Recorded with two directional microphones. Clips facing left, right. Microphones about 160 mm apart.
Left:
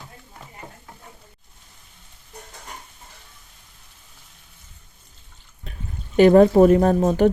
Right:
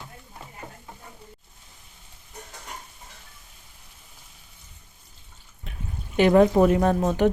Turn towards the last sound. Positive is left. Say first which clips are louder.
# left 4 dB
turn(degrees=35)  # may be behind; listen again after turning